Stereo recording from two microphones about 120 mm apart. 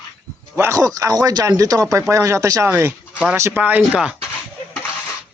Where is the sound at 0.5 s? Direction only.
25° right (ahead or behind).